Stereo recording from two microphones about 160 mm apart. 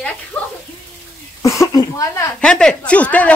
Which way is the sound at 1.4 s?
20° left (ahead or behind).